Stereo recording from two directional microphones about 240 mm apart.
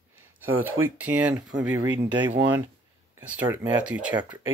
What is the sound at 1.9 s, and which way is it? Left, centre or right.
Speech, centre.